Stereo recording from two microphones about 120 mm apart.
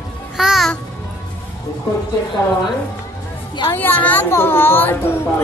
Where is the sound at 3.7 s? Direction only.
15° left (ahead or behind).